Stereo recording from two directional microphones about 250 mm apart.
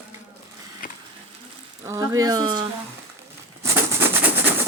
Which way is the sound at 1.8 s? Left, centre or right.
Centre.